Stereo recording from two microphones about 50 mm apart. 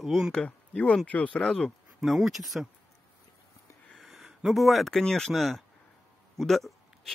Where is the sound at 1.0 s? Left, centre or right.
Left.